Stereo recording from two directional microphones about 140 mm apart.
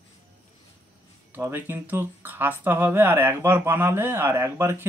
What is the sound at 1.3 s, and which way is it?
Speech, 15° right (ahead or behind).